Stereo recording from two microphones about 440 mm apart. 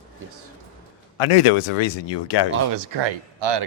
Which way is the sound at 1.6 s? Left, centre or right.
Left.